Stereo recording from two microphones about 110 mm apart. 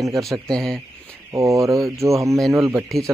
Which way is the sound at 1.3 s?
30° right (ahead or behind).